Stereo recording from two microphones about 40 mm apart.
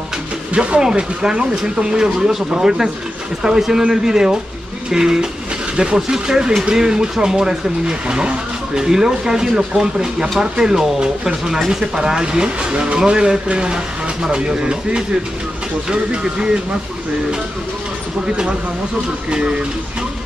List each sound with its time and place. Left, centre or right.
0.5 s speech: right
18.2 s speech: right